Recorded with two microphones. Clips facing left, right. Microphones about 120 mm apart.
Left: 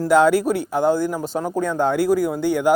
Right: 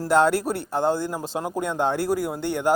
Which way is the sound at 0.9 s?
25° right (ahead or behind).